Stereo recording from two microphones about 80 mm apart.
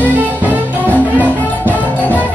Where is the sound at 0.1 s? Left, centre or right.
Right.